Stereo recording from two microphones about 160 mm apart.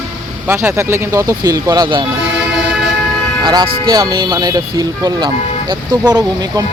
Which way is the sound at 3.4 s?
25° right (ahead or behind).